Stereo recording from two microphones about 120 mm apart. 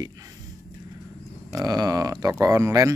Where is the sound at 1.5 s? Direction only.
30° right (ahead or behind).